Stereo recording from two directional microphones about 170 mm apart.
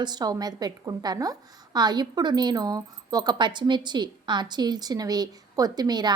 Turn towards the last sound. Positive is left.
turn(degrees=-25)  # may be behind; listen again after turning